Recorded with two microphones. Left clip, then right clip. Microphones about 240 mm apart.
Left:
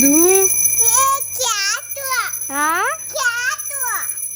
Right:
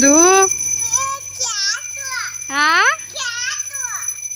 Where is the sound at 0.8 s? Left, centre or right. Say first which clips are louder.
Left 5 dB; left.